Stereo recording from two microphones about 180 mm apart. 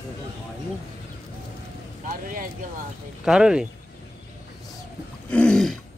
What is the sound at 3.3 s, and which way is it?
Speech, 5° right (ahead or behind).